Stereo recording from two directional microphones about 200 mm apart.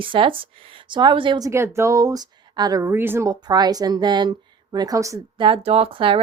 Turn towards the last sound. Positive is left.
turn(degrees=-25)  # may be behind; listen again after turning